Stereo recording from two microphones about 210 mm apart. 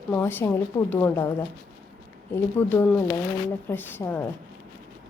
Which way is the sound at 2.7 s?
10° left (ahead or behind).